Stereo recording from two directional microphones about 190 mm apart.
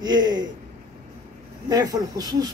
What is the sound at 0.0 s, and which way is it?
Speech, 20° right (ahead or behind).